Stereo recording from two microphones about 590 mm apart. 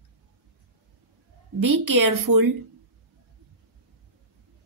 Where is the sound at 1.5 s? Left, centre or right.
Right.